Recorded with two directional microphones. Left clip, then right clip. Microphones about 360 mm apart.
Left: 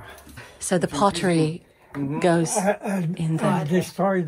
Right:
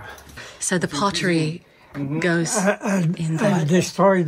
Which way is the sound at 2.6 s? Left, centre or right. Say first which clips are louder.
Right 3 dB; right.